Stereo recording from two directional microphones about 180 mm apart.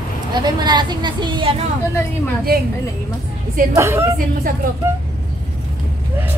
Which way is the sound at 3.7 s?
15° right (ahead or behind).